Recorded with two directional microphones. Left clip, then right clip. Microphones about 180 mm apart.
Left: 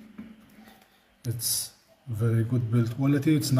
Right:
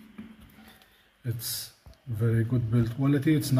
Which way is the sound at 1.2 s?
Centre (ahead or behind).